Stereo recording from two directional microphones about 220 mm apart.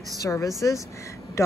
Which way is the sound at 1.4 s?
15° left (ahead or behind).